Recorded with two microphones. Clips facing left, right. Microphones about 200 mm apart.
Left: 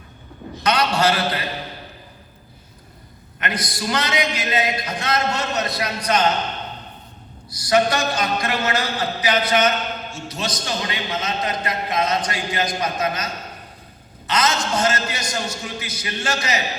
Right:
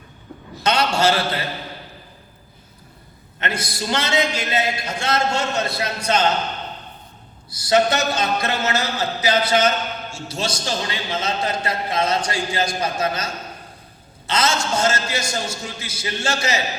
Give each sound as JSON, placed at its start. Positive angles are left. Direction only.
{"t": 0.6, "sound": "a man's voice", "side_deg": -25}
{"t": 3.4, "sound": "a man's voice", "side_deg": -25}
{"t": 7.5, "sound": "a man's voice", "side_deg": -25}